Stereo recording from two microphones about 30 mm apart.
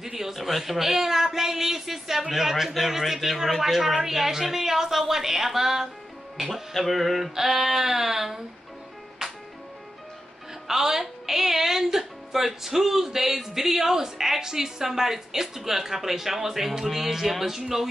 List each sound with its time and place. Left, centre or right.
0.0 s a man's voice: centre
0.4 s a woman's voice: centre
6.5 s a sound: centre
7.3 s a woman's voice: centre
9.2 s music: centre
10.7 s a woman's voice: centre